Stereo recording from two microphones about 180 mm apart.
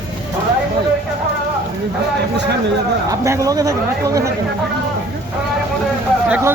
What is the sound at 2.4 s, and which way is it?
Speech, 70° right (ahead or behind).